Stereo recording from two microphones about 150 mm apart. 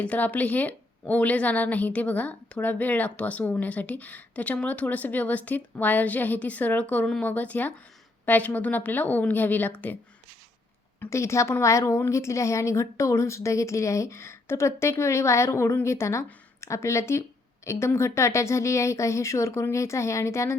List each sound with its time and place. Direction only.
0.0 s a woman's voice: 10° left (ahead or behind)
11.0 s a woman's voice: 20° left (ahead or behind)